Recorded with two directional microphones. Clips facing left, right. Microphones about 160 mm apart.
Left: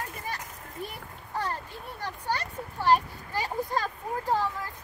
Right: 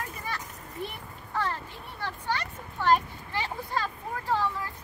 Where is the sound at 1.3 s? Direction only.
40° left (ahead or behind).